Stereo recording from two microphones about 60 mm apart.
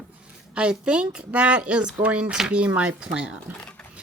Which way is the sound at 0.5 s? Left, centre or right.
Centre.